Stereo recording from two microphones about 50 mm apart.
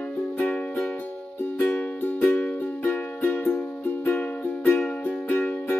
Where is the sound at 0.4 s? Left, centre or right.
Left.